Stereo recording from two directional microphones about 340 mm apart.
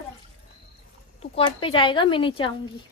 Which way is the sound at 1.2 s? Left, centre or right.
Centre.